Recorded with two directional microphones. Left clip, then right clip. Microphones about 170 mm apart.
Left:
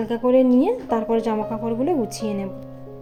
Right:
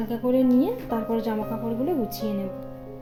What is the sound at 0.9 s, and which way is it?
Speech, 15° left (ahead or behind).